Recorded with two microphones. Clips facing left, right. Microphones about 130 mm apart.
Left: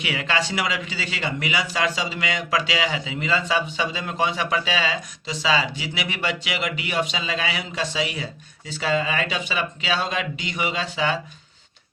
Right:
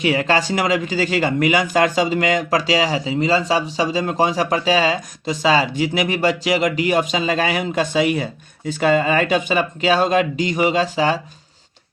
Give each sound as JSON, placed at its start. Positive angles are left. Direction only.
{"t": 0.0, "sound": "a man's voice", "side_deg": -40}